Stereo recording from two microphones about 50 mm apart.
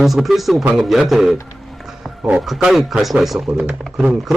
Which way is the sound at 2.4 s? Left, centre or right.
Centre.